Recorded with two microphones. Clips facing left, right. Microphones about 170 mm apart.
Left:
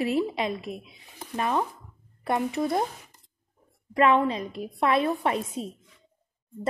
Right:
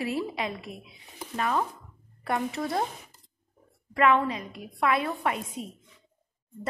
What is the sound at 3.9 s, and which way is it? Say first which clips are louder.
A woman's voice: left 2 dB; 25° left (ahead or behind).